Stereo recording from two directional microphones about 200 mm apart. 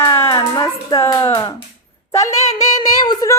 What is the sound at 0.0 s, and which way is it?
Music, 15° left (ahead or behind).